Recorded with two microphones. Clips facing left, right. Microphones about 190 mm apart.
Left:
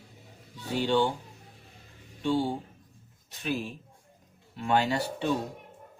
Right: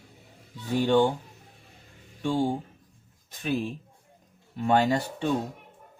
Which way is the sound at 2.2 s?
50° right (ahead or behind).